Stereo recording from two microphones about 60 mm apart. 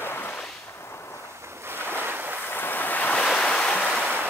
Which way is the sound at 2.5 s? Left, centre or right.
Left.